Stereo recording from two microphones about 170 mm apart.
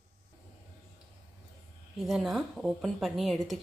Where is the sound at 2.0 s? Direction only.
Centre (ahead or behind).